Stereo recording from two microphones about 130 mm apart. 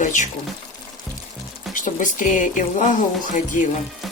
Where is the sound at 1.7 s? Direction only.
80° left.